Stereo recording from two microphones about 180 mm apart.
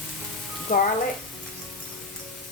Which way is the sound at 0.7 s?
45° left (ahead or behind).